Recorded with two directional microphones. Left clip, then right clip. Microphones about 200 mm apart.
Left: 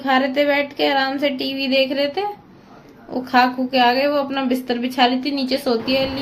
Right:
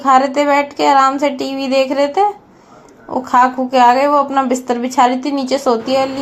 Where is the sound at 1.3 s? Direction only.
55° right (ahead or behind).